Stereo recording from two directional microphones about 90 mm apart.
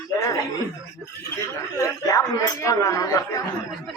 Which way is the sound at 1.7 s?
40° left (ahead or behind).